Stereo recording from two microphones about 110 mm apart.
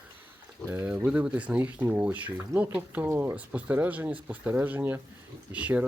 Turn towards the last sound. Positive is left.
turn(degrees=-15)  # may be behind; listen again after turning